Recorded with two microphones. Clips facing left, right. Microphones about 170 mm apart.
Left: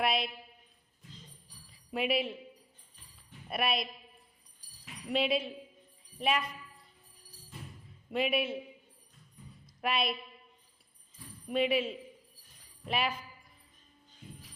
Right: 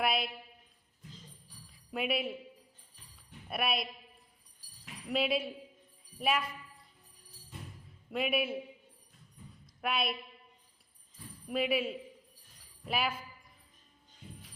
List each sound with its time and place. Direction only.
0.0 s speech: centre (ahead or behind)
1.7 s speech: centre (ahead or behind)
3.5 s speech: centre (ahead or behind)
5.0 s speech: centre (ahead or behind)
8.1 s speech: centre (ahead or behind)
9.8 s speech: centre (ahead or behind)
11.4 s speech: centre (ahead or behind)